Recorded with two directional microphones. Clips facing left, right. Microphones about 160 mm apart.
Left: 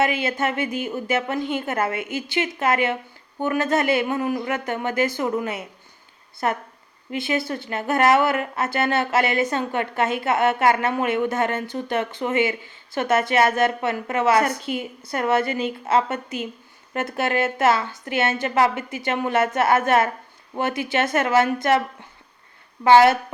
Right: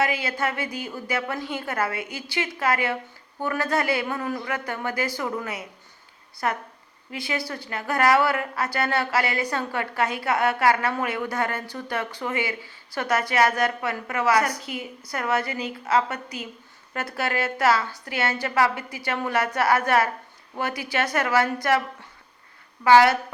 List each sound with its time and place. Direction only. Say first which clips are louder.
0.0 s a woman's voice: left 3 dB; 25° left (ahead or behind)
22.8 s a woman's voice: left 2 dB; 25° left (ahead or behind)